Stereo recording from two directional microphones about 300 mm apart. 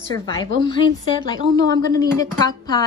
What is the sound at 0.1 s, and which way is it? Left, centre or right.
A woman's voice, centre.